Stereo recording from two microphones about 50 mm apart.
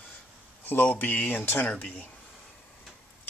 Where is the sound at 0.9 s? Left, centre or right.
Left.